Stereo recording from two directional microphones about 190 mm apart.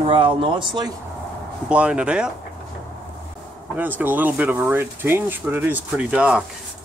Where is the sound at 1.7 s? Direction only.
5° right (ahead or behind).